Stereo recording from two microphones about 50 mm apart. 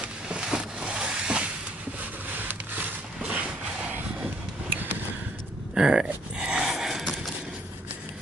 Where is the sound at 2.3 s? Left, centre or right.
Right.